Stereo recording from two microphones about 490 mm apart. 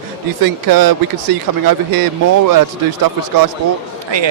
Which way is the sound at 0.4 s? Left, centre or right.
Right.